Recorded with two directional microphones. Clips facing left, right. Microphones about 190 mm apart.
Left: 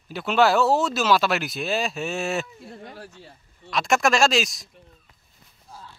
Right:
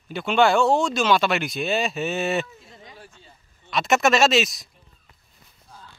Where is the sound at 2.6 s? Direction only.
60° left (ahead or behind).